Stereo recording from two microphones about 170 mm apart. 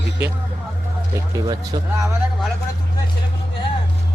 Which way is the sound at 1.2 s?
20° right (ahead or behind).